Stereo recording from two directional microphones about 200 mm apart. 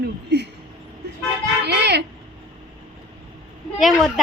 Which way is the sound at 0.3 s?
55° right (ahead or behind).